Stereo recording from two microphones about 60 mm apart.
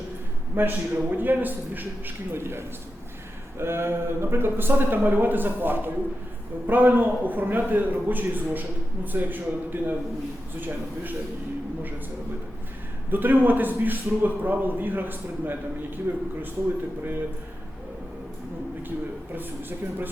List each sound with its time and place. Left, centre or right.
0.5 s a man's voice: right
13.1 s a man's voice: right